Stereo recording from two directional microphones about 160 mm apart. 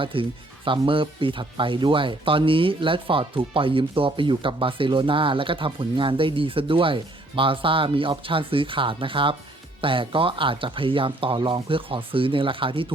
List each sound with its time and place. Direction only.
0.0 s speech: 35° right (ahead or behind)